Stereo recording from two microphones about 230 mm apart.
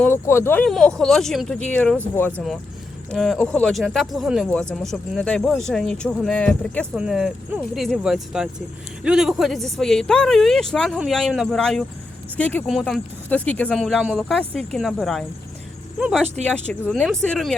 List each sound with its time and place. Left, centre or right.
0.0 s speech: centre